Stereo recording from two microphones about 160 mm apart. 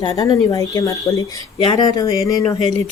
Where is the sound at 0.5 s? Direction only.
20° left (ahead or behind).